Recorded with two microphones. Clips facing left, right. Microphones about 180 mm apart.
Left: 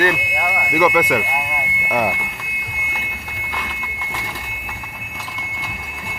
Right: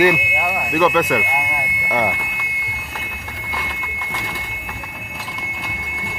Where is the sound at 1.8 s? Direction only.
5° left (ahead or behind).